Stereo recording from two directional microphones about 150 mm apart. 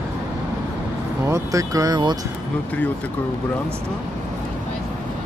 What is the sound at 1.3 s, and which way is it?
Speech, 20° right (ahead or behind).